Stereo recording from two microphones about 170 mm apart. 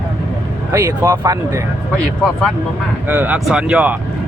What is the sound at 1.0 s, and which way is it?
Speech, 20° right (ahead or behind).